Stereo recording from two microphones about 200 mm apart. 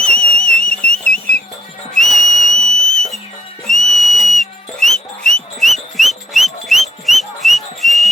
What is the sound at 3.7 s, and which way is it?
Whistle, centre (ahead or behind).